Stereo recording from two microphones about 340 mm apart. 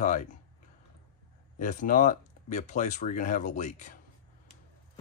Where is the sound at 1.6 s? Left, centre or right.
Left.